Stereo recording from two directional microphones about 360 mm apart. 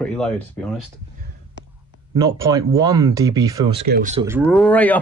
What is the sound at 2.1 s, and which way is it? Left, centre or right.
Speech, centre.